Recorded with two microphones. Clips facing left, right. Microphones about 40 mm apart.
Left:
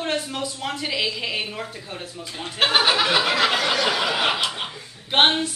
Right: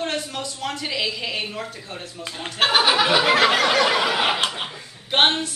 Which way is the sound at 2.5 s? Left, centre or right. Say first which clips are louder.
Right 1 dB; centre.